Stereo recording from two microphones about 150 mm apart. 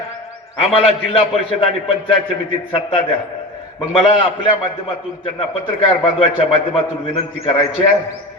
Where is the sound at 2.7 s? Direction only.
35° left (ahead or behind).